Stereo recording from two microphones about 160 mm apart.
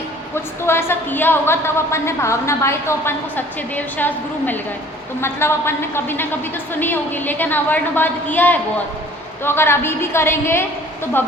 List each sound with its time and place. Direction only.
0.3 s a woman's voice: 15° left (ahead or behind)